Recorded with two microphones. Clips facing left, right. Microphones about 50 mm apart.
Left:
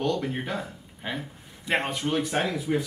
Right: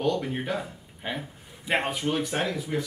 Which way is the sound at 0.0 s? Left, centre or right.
Centre.